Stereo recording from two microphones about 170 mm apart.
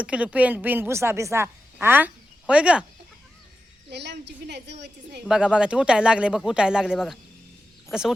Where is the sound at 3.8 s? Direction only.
85° right.